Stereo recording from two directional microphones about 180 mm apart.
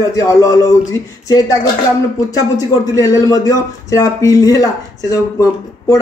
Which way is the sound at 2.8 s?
20° left (ahead or behind).